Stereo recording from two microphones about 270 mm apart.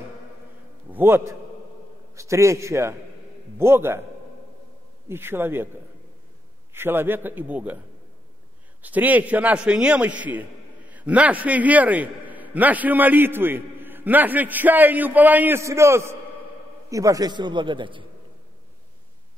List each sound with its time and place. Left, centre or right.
0.9 s a man's voice: centre
5.0 s a man's voice: centre
6.7 s a man's voice: centre
8.8 s a man's voice: centre